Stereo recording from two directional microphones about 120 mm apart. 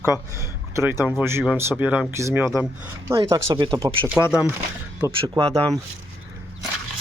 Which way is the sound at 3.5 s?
45° right (ahead or behind).